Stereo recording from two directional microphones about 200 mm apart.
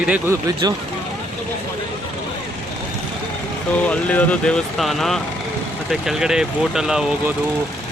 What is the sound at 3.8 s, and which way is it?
Speech, 5° left (ahead or behind).